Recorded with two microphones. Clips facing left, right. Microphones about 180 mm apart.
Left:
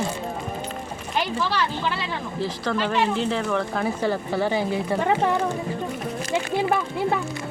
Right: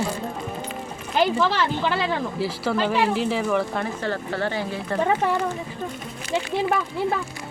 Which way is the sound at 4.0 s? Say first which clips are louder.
Left 3 dB; 10° left (ahead or behind).